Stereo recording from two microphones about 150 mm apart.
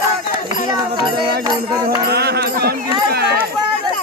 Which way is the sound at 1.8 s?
90° right.